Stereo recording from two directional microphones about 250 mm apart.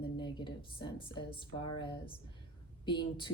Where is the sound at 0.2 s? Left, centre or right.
Centre.